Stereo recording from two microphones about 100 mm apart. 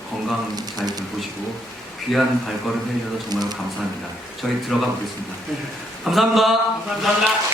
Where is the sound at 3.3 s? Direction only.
40° right (ahead or behind).